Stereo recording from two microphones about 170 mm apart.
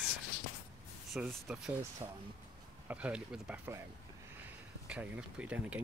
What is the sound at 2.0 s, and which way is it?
Speech, 20° right (ahead or behind).